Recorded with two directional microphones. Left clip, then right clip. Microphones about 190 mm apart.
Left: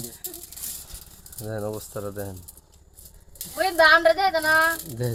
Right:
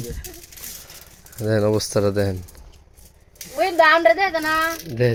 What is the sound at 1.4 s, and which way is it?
Speech, 35° right (ahead or behind).